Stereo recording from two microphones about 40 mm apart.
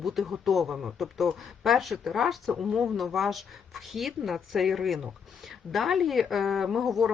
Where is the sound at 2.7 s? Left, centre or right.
Centre.